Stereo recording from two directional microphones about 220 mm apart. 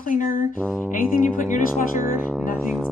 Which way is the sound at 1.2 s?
35° left (ahead or behind).